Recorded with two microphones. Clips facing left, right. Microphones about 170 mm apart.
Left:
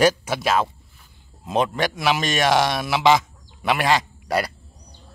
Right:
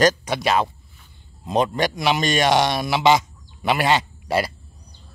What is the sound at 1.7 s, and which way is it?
Speech, centre (ahead or behind).